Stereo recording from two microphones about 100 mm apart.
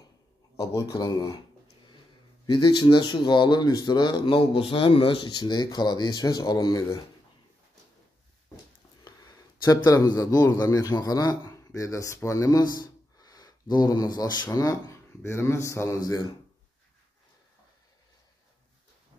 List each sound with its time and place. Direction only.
0.6 s speech: 35° left (ahead or behind)
2.4 s speech: 50° left (ahead or behind)
9.0 s a sound: 40° left (ahead or behind)
9.8 s a man's voice: 35° left (ahead or behind)